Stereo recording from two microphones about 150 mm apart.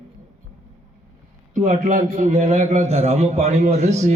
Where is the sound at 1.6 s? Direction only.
55° right (ahead or behind).